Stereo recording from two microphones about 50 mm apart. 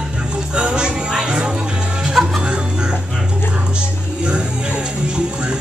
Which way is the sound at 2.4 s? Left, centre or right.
Centre.